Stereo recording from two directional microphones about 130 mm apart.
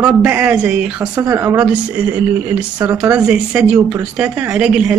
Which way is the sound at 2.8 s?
30° right (ahead or behind).